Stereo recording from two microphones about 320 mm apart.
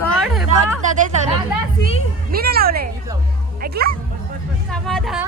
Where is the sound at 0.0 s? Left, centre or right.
Centre.